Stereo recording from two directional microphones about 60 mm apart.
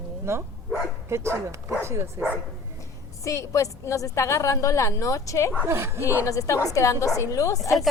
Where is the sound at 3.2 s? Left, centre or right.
Left.